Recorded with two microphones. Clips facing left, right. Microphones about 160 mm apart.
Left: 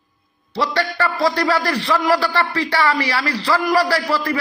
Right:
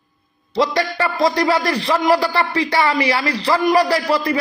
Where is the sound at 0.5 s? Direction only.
15° right (ahead or behind).